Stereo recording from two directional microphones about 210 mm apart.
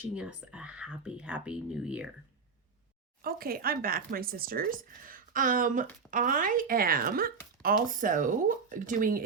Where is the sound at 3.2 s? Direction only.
45° right (ahead or behind).